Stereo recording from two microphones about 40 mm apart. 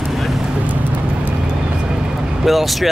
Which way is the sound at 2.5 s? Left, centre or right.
Centre.